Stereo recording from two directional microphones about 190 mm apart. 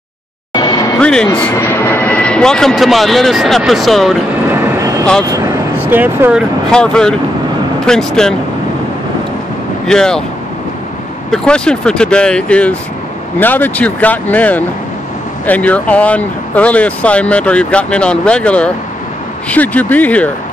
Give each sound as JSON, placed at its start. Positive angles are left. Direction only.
{"t": 0.6, "sound": "music", "side_deg": 20}
{"t": 0.9, "sound": "speech", "side_deg": 5}
{"t": 4.5, "sound": "train", "side_deg": -15}
{"t": 5.3, "sound": "speech", "side_deg": -15}
{"t": 6.7, "sound": "speech", "side_deg": 5}
{"t": 9.8, "sound": "speech", "side_deg": 5}
{"t": 11.2, "sound": "speech", "side_deg": 5}